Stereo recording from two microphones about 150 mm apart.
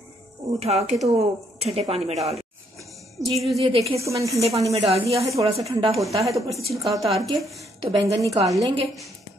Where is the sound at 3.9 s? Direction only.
20° right (ahead or behind).